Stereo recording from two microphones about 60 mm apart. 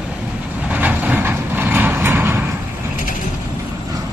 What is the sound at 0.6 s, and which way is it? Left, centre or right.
Vehicle, right.